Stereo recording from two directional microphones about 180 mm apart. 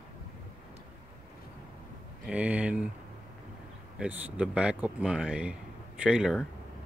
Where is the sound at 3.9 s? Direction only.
10° right (ahead or behind).